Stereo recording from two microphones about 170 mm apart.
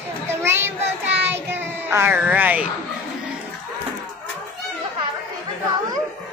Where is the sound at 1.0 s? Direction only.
10° right (ahead or behind).